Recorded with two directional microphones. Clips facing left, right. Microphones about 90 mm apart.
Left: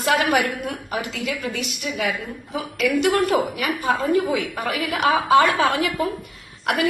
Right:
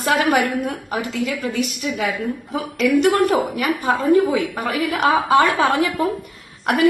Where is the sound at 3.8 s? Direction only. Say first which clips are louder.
Right 4 dB; 30° right (ahead or behind).